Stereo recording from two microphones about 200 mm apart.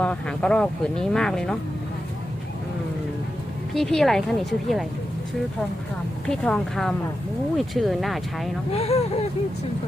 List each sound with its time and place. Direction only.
0.0 s speech: 5° left (ahead or behind)
3.8 s speech: centre (ahead or behind)
6.2 s speech: 5° left (ahead or behind)
8.7 s speech: 30° left (ahead or behind)